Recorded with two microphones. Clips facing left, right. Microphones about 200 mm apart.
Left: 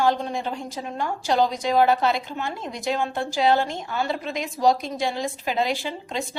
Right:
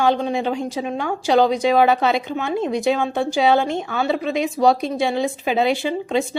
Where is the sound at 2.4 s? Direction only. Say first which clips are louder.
Right 9 dB; 70° right (ahead or behind).